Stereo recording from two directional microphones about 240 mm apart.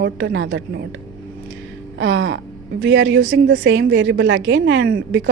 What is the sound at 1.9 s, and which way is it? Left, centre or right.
A woman's voice, right.